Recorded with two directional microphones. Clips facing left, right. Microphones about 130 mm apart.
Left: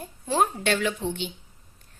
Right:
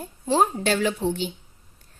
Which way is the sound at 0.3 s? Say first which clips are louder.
Right 3 dB; 35° right (ahead or behind).